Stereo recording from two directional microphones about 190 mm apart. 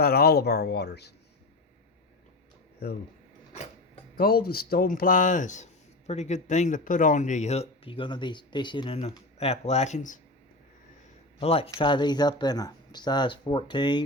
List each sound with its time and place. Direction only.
0.0 s speech: 55° left (ahead or behind)
4.2 s speech: 50° left (ahead or behind)
11.3 s speech: 30° left (ahead or behind)